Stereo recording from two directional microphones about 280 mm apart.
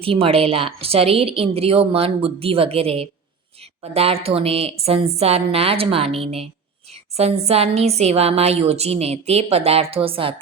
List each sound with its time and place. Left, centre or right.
0.0 s a woman's voice: centre